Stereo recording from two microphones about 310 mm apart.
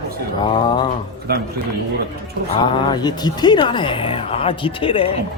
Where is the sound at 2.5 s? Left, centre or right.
Centre.